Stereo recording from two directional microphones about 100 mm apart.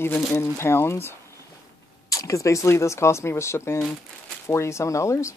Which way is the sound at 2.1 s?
35° left (ahead or behind).